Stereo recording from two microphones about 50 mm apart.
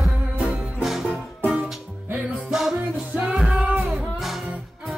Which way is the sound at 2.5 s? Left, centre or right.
Centre.